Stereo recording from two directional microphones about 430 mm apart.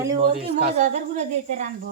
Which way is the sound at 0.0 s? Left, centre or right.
Centre.